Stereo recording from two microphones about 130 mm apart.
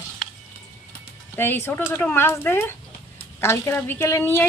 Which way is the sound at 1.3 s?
15° left (ahead or behind).